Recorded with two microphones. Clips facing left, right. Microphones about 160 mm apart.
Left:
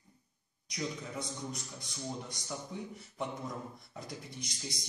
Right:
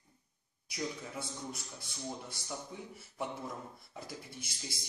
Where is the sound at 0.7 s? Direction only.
5° right (ahead or behind).